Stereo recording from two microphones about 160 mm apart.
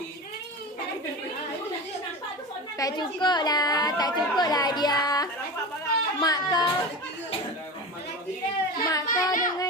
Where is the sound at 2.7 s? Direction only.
25° left (ahead or behind).